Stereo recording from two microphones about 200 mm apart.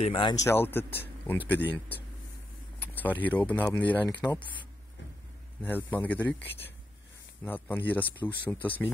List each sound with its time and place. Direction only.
0.0 s speech: 25° left (ahead or behind)
0.5 s speech: 10° left (ahead or behind)
2.8 s speech: 10° left (ahead or behind)